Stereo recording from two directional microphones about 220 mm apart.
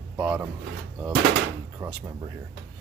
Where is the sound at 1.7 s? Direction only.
10° right (ahead or behind).